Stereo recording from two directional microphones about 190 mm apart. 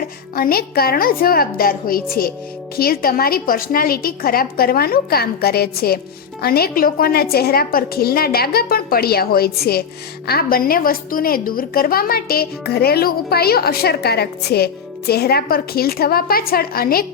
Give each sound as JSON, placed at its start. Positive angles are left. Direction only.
{"t": 0.3, "sound": "a woman's voice", "side_deg": 50}